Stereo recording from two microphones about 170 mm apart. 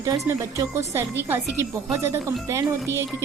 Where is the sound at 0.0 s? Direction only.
20° right (ahead or behind).